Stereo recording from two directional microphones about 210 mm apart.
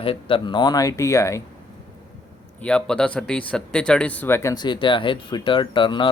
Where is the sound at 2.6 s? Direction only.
5° left (ahead or behind).